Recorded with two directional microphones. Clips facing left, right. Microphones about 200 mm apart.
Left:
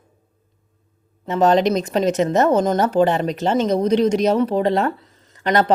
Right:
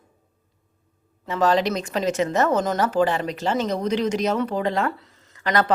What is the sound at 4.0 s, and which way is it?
A woman's voice, 30° left (ahead or behind).